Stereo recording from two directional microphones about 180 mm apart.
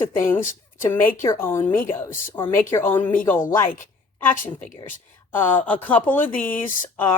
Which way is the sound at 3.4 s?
50° left (ahead or behind).